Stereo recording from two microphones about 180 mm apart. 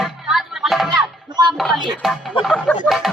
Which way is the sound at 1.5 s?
Centre (ahead or behind).